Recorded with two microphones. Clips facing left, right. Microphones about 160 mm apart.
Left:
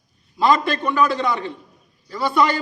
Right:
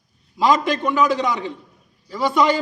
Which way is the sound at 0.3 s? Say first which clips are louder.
Even; 15° right (ahead or behind).